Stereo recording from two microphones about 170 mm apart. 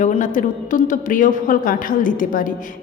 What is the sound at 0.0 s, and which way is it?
A woman's voice, 45° left (ahead or behind).